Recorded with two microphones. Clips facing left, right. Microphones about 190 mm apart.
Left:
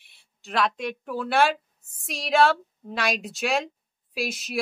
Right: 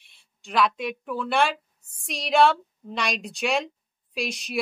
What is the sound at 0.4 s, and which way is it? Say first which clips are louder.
A woman's voice: right 2 dB; centre (ahead or behind).